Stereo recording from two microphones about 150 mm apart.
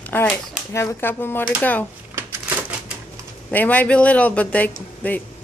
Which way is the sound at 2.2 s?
15° right (ahead or behind).